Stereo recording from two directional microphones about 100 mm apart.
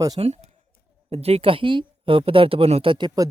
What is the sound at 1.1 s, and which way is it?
A woman's voice, 85° right.